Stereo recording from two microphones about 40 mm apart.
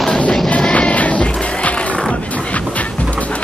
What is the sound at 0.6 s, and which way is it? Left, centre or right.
Music, left.